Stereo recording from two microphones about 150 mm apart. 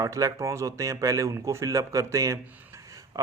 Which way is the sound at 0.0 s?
20° right (ahead or behind).